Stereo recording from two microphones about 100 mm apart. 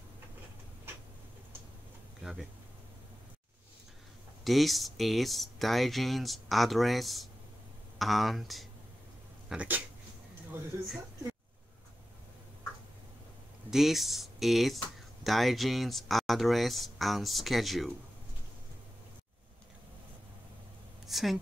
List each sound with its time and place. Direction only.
4.5 s speech: centre (ahead or behind)
10.5 s speech: 25° right (ahead or behind)
13.7 s speech: 5° right (ahead or behind)
21.1 s speech: centre (ahead or behind)